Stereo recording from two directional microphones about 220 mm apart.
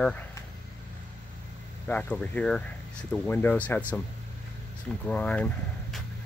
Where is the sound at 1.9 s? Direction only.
5° left (ahead or behind).